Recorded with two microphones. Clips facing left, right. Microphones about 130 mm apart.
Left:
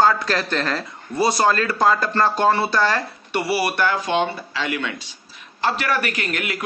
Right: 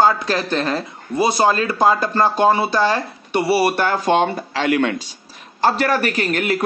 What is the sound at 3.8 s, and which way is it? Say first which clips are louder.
A man's voice: right 4 dB; 40° right (ahead or behind).